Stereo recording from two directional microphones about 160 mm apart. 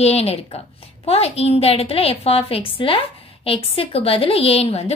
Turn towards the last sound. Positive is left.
turn(degrees=40)  # may be behind; listen again after turning